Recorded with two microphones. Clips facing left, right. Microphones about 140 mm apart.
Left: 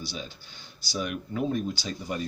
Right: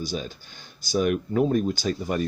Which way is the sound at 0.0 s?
45° right (ahead or behind).